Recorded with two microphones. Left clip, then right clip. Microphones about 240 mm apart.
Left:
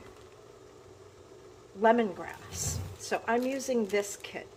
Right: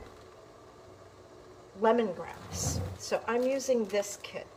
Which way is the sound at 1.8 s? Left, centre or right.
Centre.